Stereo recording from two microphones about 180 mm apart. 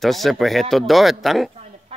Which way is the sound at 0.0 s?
Centre (ahead or behind).